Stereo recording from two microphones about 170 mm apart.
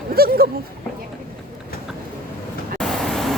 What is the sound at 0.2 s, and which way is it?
Speech, 65° right (ahead or behind).